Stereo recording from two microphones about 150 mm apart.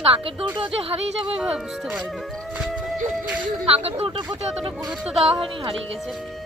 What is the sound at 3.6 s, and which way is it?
Speech, 40° right (ahead or behind).